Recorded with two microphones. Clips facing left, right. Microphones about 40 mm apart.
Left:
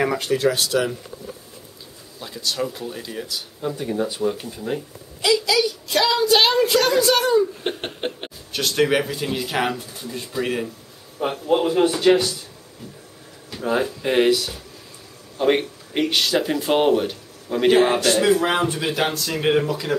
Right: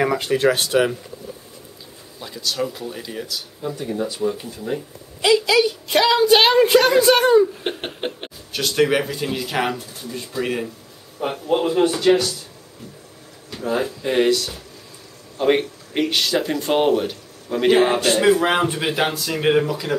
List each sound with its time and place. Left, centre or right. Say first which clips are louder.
0.0 s speech: right 2 dB; centre
0.3 s a woman's voice: right 3 dB; right
2.1 s speech: right 1 dB; centre
3.3 s speech: left 1 dB; centre
5.2 s a woman's voice: right 3 dB; right
7.6 s speech: even; centre
13.5 s a sound: left 1 dB; centre
14.0 s speech: even; centre
18.0 s speech: right 1 dB; centre